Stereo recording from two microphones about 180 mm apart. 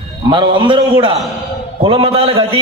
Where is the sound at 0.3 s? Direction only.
25° right (ahead or behind).